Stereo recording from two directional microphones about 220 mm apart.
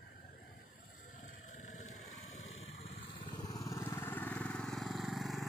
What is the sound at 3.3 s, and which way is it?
Vehicle, 15° left (ahead or behind).